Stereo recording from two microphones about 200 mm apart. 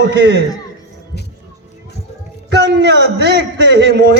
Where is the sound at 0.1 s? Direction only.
60° right (ahead or behind).